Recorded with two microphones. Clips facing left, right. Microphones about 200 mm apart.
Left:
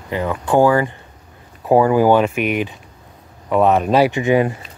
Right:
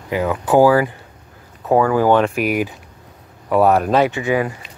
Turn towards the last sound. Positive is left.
turn(degrees=20)  # may be behind; listen again after turning